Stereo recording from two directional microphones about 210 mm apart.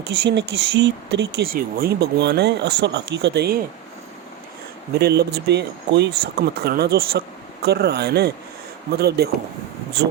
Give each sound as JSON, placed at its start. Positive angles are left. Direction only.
{"t": 0.3, "sound": "speech", "side_deg": -55}
{"t": 4.9, "sound": "speech", "side_deg": -50}